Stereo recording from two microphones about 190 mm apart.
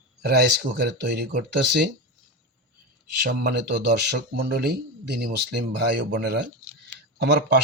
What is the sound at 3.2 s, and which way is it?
Speech, 60° right (ahead or behind).